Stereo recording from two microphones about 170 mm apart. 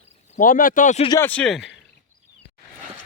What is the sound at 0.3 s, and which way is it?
Speech, 55° left (ahead or behind).